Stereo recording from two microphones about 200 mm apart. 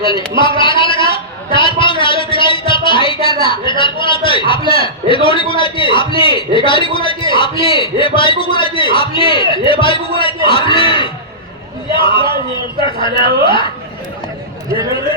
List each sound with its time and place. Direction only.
0.3 s speech: 25° left (ahead or behind)